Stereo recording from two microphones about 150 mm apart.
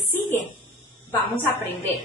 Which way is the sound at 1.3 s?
15° left (ahead or behind).